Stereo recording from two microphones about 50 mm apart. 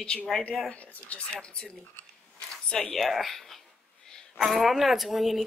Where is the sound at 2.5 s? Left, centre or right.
Centre.